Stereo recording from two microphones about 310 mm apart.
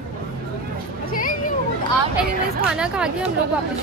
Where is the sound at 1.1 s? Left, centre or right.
Left.